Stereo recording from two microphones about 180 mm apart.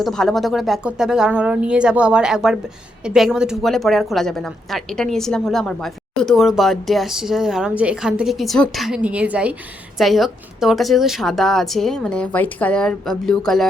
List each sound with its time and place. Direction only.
0.0 s a woman's voice: 5° left (ahead or behind)